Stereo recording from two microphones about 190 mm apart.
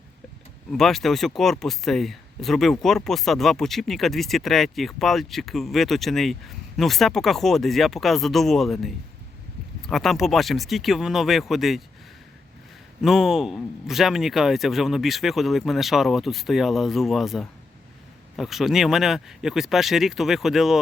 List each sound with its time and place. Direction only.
0.7 s speech: centre (ahead or behind)
13.0 s speech: centre (ahead or behind)